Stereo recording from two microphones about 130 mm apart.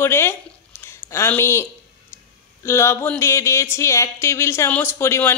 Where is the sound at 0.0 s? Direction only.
20° left (ahead or behind).